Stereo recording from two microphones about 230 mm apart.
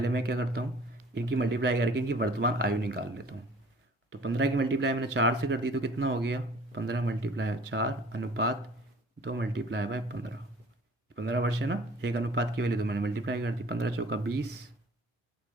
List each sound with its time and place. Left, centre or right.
0.0 s speech: right
4.1 s speech: right